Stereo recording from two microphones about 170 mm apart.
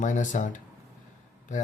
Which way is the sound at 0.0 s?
45° left (ahead or behind).